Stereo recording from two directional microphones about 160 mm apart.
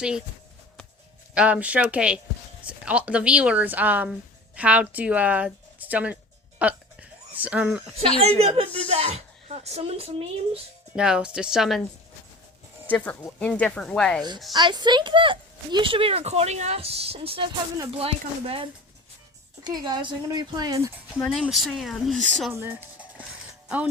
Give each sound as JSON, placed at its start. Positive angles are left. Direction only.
{"t": 1.3, "sound": "speech", "side_deg": -5}
{"t": 6.6, "sound": "a sound", "side_deg": -10}
{"t": 8.4, "sound": "speech", "side_deg": -40}
{"t": 10.9, "sound": "speech", "side_deg": -5}
{"t": 13.2, "sound": "speech", "side_deg": 5}
{"t": 14.5, "sound": "a woman's voice", "side_deg": -25}
{"t": 21.2, "sound": "speech", "side_deg": 0}
{"t": 22.5, "sound": "speech", "side_deg": -15}